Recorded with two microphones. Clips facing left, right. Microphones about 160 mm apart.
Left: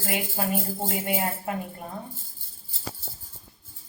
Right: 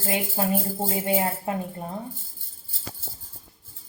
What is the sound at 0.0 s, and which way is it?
Speech, 30° right (ahead or behind).